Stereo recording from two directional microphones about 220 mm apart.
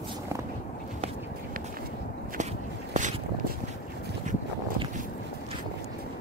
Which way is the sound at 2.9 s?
35° right (ahead or behind).